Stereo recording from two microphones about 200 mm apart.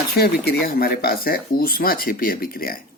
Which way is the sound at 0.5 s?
50° left (ahead or behind).